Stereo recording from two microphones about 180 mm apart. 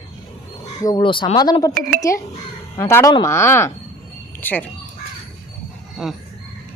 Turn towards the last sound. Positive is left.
turn(degrees=0)  # may be behind; listen again after turning